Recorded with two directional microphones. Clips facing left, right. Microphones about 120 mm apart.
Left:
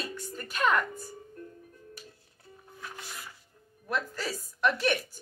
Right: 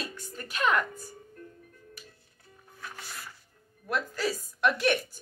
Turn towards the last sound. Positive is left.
turn(degrees=0)  # may be behind; listen again after turning